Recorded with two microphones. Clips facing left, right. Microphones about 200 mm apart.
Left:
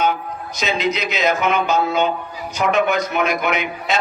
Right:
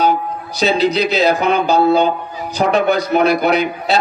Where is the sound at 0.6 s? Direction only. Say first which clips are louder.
Right 7 dB; 35° right (ahead or behind).